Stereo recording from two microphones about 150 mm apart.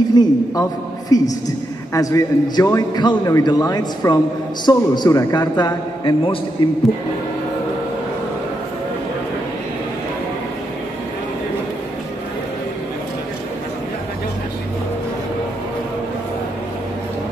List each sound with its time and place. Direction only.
0.1 s a man's voice: 25° left (ahead or behind)